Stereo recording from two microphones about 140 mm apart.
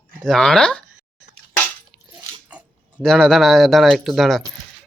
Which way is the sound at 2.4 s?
10° right (ahead or behind).